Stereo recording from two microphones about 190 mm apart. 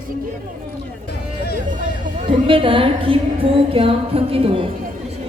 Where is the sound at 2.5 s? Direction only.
30° right (ahead or behind).